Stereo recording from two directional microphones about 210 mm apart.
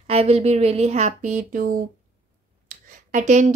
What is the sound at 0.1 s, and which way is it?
Speech, 30° right (ahead or behind).